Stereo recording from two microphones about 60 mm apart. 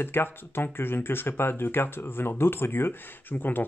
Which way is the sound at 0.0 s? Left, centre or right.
Left.